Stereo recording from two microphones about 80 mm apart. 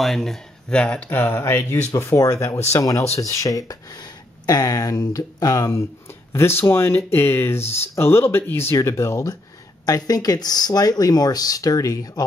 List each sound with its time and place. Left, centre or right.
0.0 s speech: centre
1.1 s speech: left
9.8 s speech: left